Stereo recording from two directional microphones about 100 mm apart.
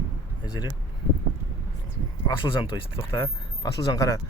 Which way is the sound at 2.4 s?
55° left (ahead or behind).